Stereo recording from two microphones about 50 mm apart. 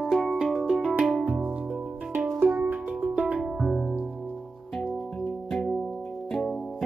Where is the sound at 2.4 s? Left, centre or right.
Centre.